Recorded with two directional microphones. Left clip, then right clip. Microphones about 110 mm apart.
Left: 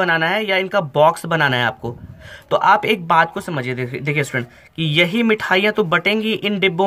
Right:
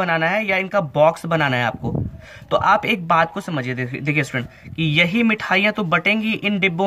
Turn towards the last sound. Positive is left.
turn(degrees=25)  # may be behind; listen again after turning